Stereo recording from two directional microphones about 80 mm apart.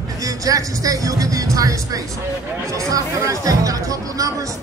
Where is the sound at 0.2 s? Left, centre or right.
Right.